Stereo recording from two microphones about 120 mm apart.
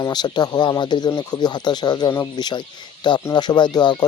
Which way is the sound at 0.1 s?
35° left (ahead or behind).